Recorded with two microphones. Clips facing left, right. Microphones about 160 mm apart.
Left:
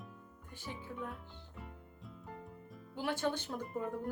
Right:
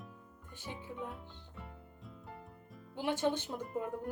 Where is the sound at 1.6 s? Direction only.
Centre (ahead or behind).